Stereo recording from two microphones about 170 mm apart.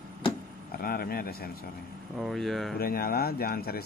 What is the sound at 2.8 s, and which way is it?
A man's voice, 60° left (ahead or behind).